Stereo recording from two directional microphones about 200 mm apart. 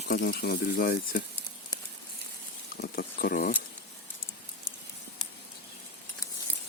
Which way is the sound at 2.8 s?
50° left (ahead or behind).